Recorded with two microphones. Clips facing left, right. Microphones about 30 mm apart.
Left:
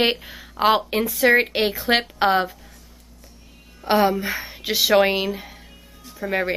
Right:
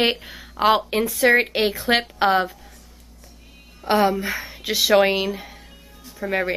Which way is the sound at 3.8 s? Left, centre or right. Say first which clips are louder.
Even; centre.